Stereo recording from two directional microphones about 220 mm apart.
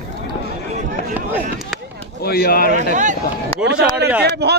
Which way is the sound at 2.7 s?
35° right (ahead or behind).